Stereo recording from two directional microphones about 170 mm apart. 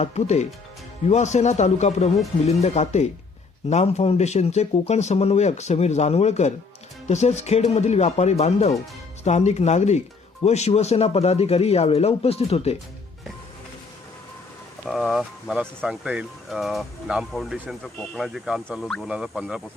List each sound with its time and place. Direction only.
0.0 s speech: 40° left (ahead or behind)
14.8 s speech: centre (ahead or behind)